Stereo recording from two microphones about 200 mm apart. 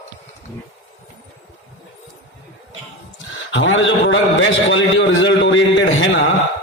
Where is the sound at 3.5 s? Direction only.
65° left (ahead or behind).